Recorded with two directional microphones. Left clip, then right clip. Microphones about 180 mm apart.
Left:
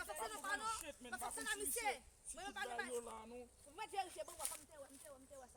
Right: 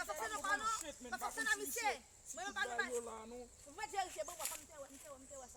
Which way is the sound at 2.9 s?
10° right (ahead or behind).